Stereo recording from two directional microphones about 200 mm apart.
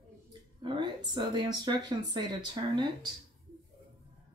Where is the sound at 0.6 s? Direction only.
20° right (ahead or behind).